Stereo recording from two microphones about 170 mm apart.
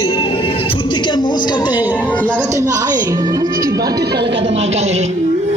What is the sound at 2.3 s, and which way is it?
Speech, 15° right (ahead or behind).